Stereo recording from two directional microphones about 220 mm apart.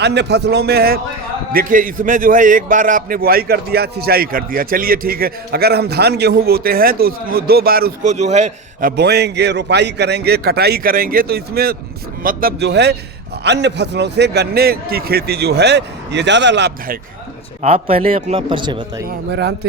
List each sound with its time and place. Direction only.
0.0 s a man's voice: 50° right (ahead or behind); by 8.9 s 30° right (ahead or behind)
9.0 s a man's voice: 50° right (ahead or behind)
17.6 s a man's voice: 25° right (ahead or behind)
19.0 s a man's voice: 50° right (ahead or behind)